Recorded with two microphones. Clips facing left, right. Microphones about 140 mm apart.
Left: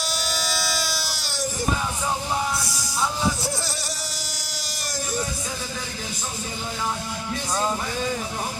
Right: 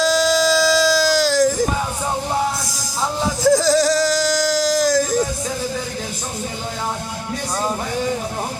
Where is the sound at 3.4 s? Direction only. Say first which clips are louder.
Right 16 dB; 90° right.